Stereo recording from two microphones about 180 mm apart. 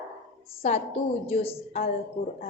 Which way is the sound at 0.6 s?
35° left (ahead or behind).